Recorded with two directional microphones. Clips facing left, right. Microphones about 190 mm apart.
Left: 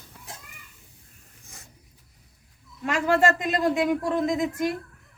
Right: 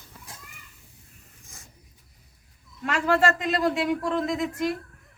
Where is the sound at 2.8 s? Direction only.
15° left (ahead or behind).